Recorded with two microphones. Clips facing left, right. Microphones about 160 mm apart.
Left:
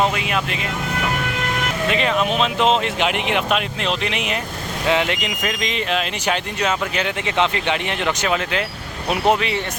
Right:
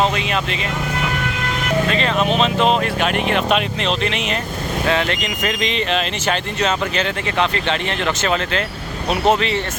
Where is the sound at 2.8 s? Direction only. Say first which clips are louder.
Right 2 dB; 15° left (ahead or behind).